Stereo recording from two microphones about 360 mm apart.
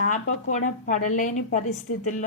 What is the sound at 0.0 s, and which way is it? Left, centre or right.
A woman's voice, left.